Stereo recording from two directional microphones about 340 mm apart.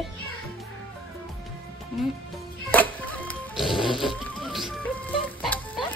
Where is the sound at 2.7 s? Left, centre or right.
Centre.